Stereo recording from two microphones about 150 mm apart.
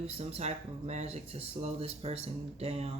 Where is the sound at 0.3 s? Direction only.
45° right (ahead or behind).